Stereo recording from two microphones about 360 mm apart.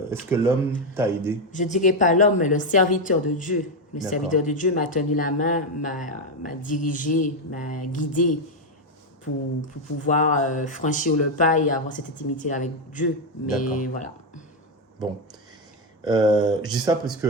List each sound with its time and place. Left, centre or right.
0.1 s speech: centre
1.5 s speech: centre
9.6 s speech: left
16.0 s speech: centre